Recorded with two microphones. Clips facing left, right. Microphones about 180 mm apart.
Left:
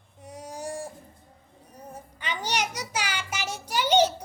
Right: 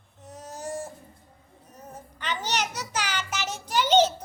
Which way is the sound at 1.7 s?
10° left (ahead or behind).